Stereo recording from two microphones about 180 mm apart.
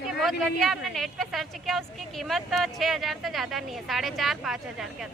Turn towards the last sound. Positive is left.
turn(degrees=0)  # may be behind; listen again after turning